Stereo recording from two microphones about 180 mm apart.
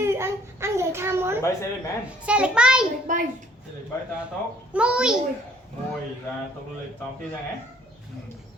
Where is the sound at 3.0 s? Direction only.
45° right (ahead or behind).